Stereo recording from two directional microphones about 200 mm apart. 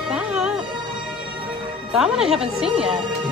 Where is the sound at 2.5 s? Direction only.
30° right (ahead or behind).